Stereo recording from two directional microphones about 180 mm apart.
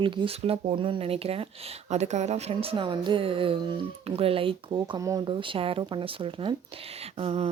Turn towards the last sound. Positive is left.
turn(degrees=-35)  # may be behind; listen again after turning